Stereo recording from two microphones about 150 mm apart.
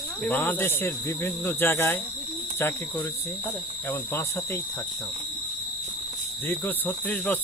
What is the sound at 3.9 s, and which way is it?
Speech, 15° left (ahead or behind).